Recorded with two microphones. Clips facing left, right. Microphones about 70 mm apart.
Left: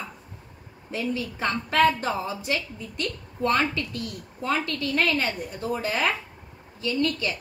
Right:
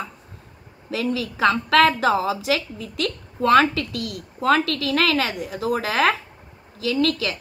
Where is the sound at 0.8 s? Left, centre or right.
Right.